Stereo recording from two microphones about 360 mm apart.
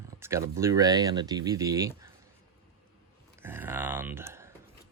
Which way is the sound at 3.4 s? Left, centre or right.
Centre.